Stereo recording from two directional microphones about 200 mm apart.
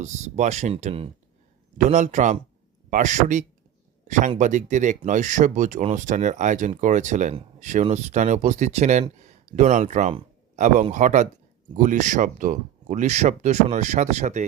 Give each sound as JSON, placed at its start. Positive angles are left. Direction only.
{"t": 0.0, "sound": "speech", "side_deg": -35}